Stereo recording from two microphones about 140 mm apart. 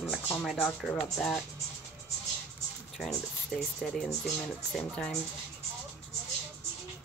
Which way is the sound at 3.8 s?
Centre (ahead or behind).